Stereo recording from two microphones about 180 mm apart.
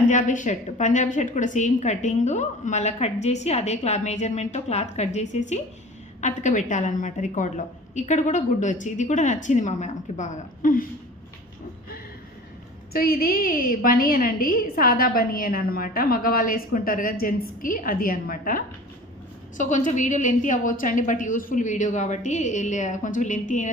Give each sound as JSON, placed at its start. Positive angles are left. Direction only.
{"t": 0.1, "sound": "a woman's voice", "side_deg": 45}
{"t": 12.9, "sound": "a woman's voice", "side_deg": 55}